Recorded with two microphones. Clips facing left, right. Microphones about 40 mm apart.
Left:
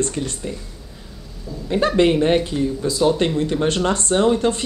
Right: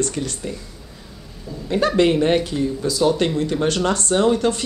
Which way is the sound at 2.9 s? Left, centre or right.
Centre.